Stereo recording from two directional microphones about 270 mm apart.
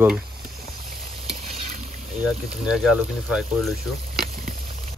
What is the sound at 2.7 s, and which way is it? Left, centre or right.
Speech, centre.